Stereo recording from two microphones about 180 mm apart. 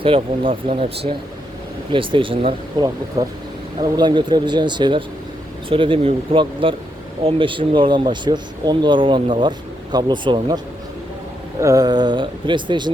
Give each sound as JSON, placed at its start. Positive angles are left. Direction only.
{"t": 0.0, "sound": "speech", "side_deg": -30}
{"t": 3.2, "sound": "speech", "side_deg": -20}
{"t": 11.6, "sound": "speech", "side_deg": -20}